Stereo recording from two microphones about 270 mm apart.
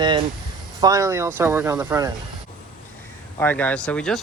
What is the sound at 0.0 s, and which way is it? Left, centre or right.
Speech, centre.